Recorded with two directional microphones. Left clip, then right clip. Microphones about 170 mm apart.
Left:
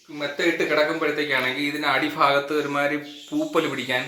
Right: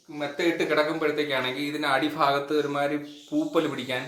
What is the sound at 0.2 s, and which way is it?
A man's voice, 10° left (ahead or behind).